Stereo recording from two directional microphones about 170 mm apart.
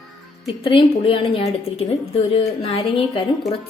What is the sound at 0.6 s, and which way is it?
A woman's voice, 35° left (ahead or behind).